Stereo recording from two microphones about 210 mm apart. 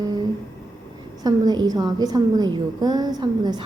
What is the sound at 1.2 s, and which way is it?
A woman's voice, 20° right (ahead or behind).